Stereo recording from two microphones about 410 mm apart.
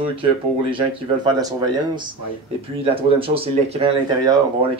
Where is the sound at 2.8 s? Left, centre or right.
Centre.